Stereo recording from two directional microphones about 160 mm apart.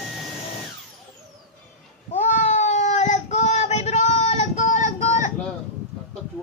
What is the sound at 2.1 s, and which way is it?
Child singing, 50° left (ahead or behind).